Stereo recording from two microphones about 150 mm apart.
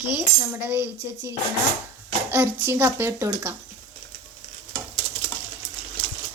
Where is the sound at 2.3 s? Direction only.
15° right (ahead or behind).